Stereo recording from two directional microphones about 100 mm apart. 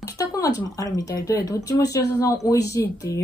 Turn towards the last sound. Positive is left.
turn(degrees=35)  # may be behind; listen again after turning